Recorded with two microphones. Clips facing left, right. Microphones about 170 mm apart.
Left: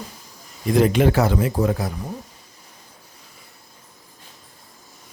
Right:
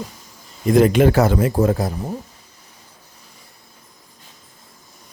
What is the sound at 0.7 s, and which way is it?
Speech, 50° right (ahead or behind).